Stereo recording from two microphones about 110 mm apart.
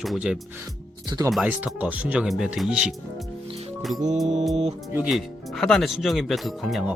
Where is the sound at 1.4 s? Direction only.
15° right (ahead or behind).